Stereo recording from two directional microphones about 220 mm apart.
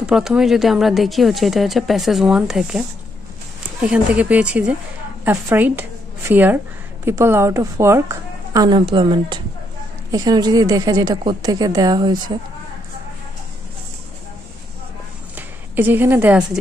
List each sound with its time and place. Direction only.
0.0 s speech: 5° right (ahead or behind)
3.8 s a woman's voice: 5° right (ahead or behind); by 12.4 s 20° right (ahead or behind)
15.3 s a sound: 10° right (ahead or behind)